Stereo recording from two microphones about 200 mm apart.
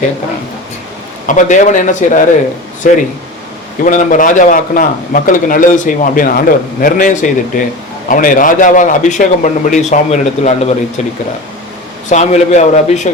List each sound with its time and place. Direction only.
1.3 s speech: 40° left (ahead or behind)
12.0 s speech: 35° left (ahead or behind)